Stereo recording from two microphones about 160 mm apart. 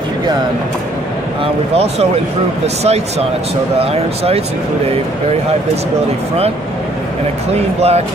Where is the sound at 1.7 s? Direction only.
40° right (ahead or behind).